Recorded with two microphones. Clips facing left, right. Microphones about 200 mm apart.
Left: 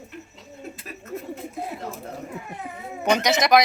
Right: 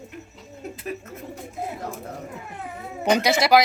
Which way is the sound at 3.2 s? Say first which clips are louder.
Even; 10° right (ahead or behind).